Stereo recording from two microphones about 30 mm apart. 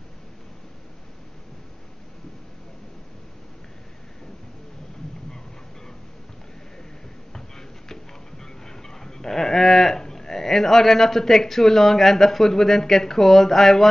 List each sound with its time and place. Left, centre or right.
7.3 s music: centre
10.0 s speech: centre